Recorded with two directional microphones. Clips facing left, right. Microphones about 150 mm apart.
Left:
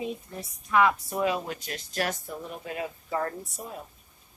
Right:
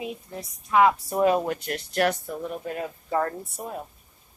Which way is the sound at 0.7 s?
25° right (ahead or behind).